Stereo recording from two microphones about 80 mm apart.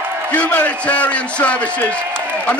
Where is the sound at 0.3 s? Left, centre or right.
Centre.